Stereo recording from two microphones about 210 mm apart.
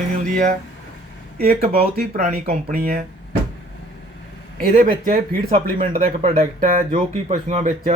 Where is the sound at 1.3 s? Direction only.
45° right (ahead or behind).